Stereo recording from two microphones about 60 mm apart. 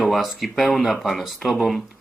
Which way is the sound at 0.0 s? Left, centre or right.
Centre.